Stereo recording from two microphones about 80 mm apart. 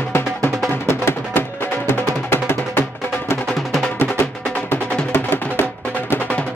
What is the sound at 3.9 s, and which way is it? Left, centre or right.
Music, left.